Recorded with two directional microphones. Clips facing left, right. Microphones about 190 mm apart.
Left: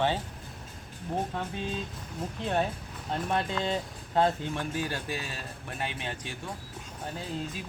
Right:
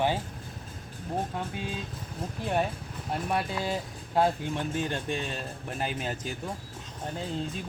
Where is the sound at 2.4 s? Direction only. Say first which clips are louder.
Right 1 dB; 10° right (ahead or behind); by 6.3 s 35° right (ahead or behind).